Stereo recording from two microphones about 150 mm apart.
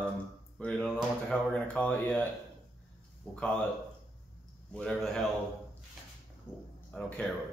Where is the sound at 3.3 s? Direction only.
10° left (ahead or behind).